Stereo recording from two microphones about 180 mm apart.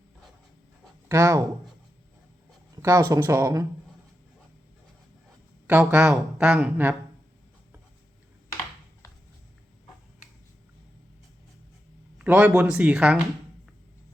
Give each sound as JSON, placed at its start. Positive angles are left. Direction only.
{"t": 1.0, "sound": "speech", "side_deg": -15}
{"t": 2.8, "sound": "a woman's voice", "side_deg": -15}
{"t": 5.6, "sound": "a woman's voice", "side_deg": -10}
{"t": 12.2, "sound": "a woman's voice", "side_deg": -10}